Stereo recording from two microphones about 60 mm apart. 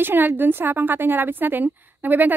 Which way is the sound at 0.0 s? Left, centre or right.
Right.